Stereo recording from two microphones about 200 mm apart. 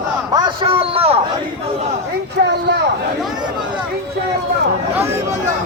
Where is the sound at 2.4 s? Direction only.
55° right (ahead or behind).